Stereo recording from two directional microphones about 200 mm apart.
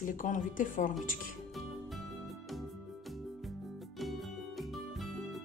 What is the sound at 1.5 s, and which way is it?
Music, centre (ahead or behind).